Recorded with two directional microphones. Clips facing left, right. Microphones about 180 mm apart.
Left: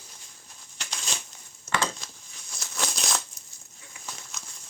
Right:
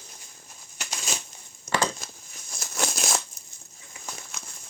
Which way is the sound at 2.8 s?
5° right (ahead or behind).